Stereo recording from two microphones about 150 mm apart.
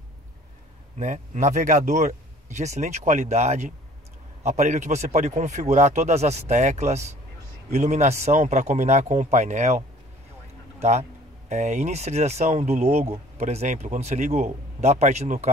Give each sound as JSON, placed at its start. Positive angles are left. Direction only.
{"t": 0.9, "sound": "speech", "side_deg": -55}